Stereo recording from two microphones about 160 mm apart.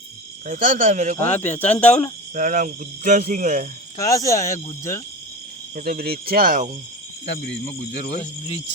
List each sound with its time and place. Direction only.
0.4 s speech: 55° right (ahead or behind)
1.5 s speech: 10° left (ahead or behind)
2.3 s speech: 55° right (ahead or behind)
3.9 s speech: 20° left (ahead or behind)
5.7 s speech: 70° right (ahead or behind)
7.9 s speech: 90° left